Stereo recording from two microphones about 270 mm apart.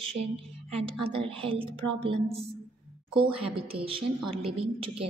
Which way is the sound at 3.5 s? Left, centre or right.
Centre.